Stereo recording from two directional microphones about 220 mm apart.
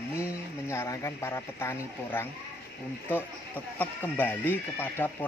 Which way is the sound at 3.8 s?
10° left (ahead or behind).